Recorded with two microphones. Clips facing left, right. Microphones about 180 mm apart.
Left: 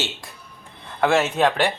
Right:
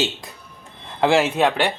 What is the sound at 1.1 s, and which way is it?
Speech, 10° right (ahead or behind).